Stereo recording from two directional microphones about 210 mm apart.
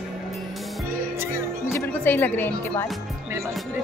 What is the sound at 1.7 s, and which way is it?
Speech, 10° left (ahead or behind).